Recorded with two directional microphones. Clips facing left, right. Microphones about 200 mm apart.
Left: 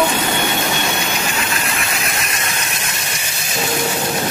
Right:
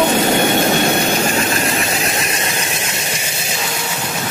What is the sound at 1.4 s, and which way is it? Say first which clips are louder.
Engine: right 5 dB; 35° right (ahead or behind).